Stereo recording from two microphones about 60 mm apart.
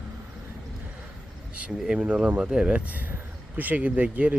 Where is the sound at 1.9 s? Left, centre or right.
Centre.